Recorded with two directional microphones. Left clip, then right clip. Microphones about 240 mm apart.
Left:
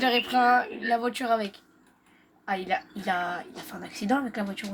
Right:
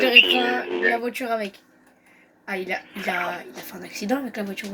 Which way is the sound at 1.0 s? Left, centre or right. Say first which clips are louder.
Right 1 dB; centre.